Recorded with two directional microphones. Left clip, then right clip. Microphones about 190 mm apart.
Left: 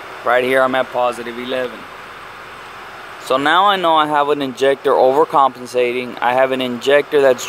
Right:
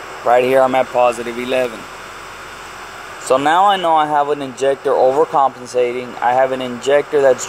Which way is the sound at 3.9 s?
45° left (ahead or behind).